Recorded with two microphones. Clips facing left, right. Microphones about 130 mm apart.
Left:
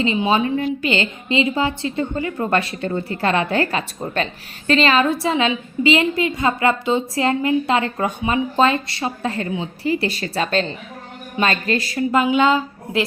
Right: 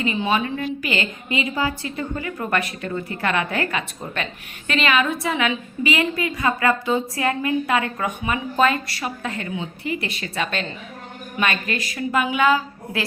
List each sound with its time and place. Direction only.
0.0 s a woman's voice: 25° left (ahead or behind)